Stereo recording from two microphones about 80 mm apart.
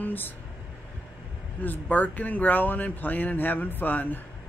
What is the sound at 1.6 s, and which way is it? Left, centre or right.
Speech, left.